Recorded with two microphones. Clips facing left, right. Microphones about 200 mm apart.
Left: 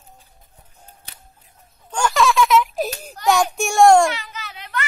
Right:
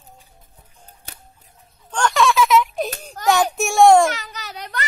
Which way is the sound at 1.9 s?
5° left (ahead or behind).